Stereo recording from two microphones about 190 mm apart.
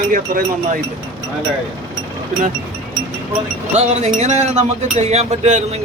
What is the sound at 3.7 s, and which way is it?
Speech, 35° right (ahead or behind).